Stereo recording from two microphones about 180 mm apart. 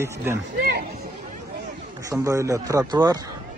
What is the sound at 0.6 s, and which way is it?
Speech, 55° right (ahead or behind).